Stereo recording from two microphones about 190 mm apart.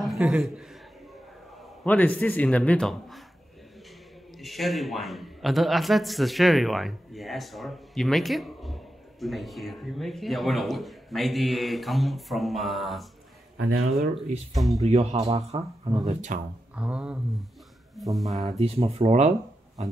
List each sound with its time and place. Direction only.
0.0 s a man's voice: centre (ahead or behind)
1.9 s speech: 10° left (ahead or behind)
4.4 s a man's voice: centre (ahead or behind)
14.6 s a man's voice: centre (ahead or behind)
14.9 s speech: 35° right (ahead or behind)
16.7 s a man's voice: 5° right (ahead or behind)
18.6 s speech: 30° right (ahead or behind)